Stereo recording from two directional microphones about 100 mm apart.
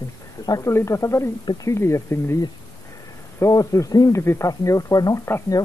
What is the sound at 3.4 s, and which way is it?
Speech, 35° left (ahead or behind).